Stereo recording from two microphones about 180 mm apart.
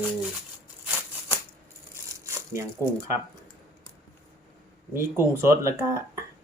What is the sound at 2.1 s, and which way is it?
Crumpling, 15° right (ahead or behind).